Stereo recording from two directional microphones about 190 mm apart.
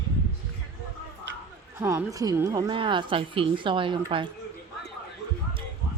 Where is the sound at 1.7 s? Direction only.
15° right (ahead or behind).